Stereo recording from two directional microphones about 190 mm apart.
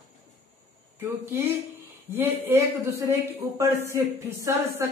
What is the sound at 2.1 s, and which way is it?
Speech, 10° right (ahead or behind).